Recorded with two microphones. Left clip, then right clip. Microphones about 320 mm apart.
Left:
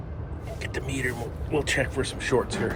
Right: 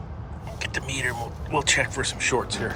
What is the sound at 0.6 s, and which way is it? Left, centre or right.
Speech, centre.